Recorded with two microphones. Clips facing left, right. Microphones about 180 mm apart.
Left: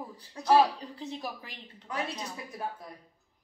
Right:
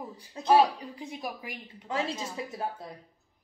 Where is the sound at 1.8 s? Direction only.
25° right (ahead or behind).